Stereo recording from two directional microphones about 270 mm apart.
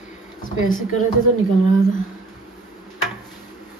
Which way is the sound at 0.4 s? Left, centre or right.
Left.